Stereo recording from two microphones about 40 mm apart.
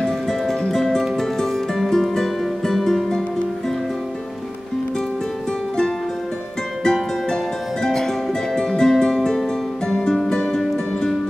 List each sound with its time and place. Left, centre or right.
0.0 s music: centre
6.8 s music: centre